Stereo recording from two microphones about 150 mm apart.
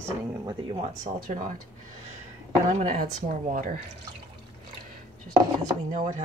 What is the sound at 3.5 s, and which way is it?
Speech, 65° right (ahead or behind).